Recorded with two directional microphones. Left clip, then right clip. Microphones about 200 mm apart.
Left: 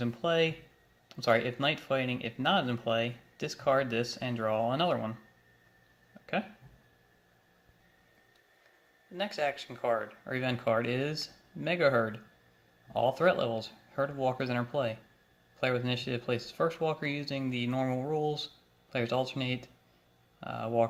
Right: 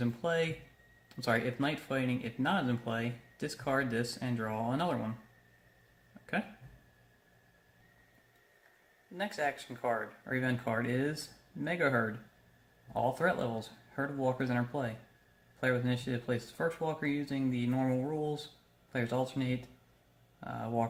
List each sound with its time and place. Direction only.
0.0 s speech: 10° left (ahead or behind)
9.1 s speech: 20° left (ahead or behind)